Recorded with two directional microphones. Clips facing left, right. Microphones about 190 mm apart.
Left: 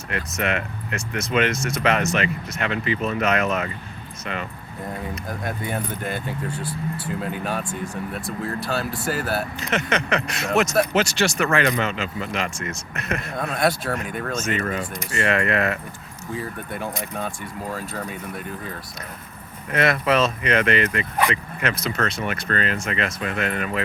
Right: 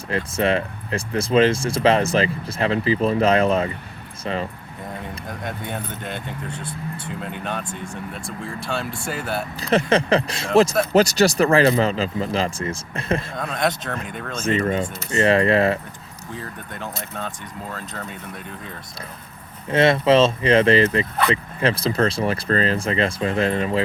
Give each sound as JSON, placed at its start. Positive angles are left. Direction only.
{"t": 0.1, "sound": "speech", "side_deg": -30}
{"t": 5.3, "sound": "speech", "side_deg": 5}
{"t": 9.6, "sound": "speech", "side_deg": -35}
{"t": 13.3, "sound": "speech", "side_deg": 5}
{"t": 14.4, "sound": "speech", "side_deg": -30}
{"t": 16.3, "sound": "speech", "side_deg": 10}
{"t": 19.7, "sound": "speech", "side_deg": -25}